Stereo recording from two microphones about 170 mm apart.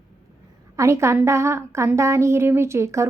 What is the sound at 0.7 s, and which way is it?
A woman's voice, 15° right (ahead or behind).